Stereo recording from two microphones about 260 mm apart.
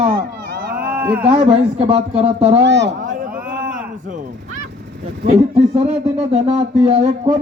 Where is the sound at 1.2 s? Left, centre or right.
Right.